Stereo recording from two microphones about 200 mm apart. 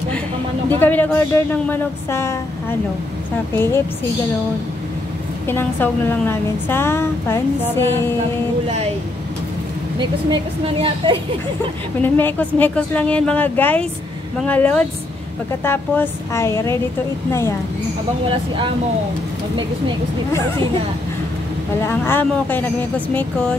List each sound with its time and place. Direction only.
0.7 s a woman's voice: 10° left (ahead or behind)
5.5 s a woman's voice: 10° left (ahead or behind)
9.9 s a woman's voice: 25° right (ahead or behind)
12.0 s a woman's voice: 10° left (ahead or behind)
21.8 s a woman's voice: 10° left (ahead or behind)